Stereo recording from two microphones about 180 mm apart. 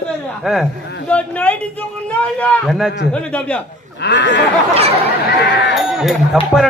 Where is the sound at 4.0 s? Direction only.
80° left.